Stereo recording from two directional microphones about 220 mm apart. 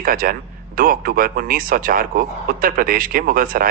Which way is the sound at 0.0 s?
40° right (ahead or behind).